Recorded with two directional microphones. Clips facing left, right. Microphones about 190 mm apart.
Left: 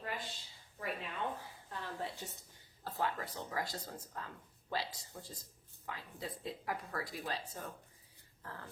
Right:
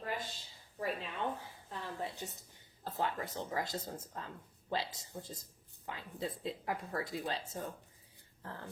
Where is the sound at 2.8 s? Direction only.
25° right (ahead or behind).